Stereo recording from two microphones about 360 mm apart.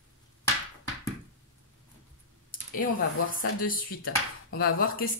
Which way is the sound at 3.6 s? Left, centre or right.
Left.